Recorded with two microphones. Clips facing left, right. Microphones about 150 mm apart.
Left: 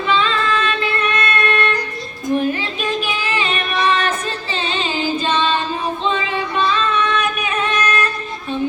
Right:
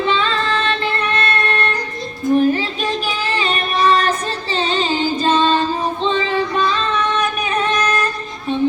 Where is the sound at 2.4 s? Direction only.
35° right (ahead or behind).